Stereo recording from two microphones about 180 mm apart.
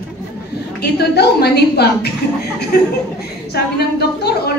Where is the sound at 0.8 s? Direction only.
65° left (ahead or behind).